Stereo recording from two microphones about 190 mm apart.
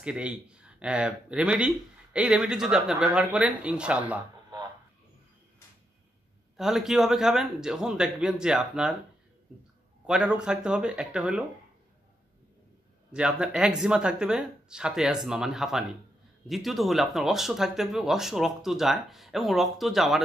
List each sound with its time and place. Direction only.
0.0 s speech: 5° right (ahead or behind)
6.5 s speech: centre (ahead or behind)
10.0 s speech: 5° right (ahead or behind)
13.1 s speech: 5° right (ahead or behind)